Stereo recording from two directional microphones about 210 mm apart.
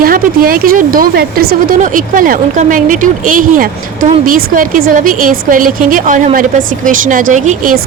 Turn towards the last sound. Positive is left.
turn(degrees=-35)  # may be behind; listen again after turning